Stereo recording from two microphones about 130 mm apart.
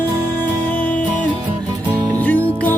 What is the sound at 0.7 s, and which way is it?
Music, 10° left (ahead or behind).